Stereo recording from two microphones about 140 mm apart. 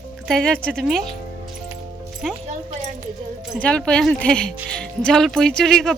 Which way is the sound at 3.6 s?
5° left (ahead or behind).